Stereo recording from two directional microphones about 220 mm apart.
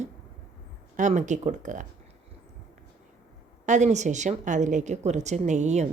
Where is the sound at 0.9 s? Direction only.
35° right (ahead or behind).